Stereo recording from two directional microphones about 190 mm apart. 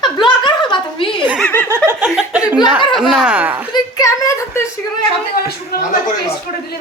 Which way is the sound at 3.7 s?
15° left (ahead or behind).